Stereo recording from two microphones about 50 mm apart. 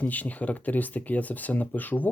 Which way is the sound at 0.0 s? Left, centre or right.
Left.